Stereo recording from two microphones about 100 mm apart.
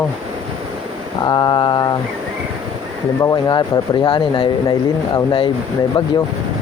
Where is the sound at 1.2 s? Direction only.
45° left (ahead or behind).